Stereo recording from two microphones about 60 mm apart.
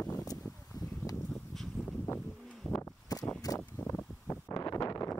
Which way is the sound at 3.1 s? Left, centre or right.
Left.